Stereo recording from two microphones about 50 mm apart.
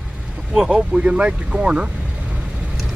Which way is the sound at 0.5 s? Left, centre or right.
Centre.